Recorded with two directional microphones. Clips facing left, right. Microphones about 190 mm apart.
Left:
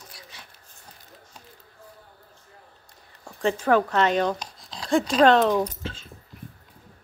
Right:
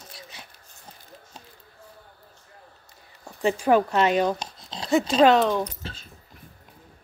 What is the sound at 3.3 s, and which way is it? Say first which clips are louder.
Speech: right 1 dB; 5° right (ahead or behind).